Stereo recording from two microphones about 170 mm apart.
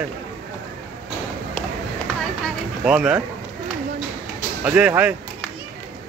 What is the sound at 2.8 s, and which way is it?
Speech, 5° right (ahead or behind).